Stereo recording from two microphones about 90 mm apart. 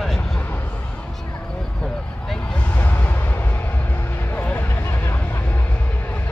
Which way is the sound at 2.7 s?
20° left (ahead or behind).